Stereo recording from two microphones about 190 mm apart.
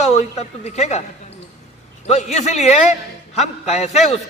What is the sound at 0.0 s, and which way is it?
Speech, 35° left (ahead or behind).